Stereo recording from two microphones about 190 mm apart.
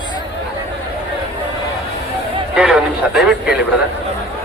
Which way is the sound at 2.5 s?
5° right (ahead or behind).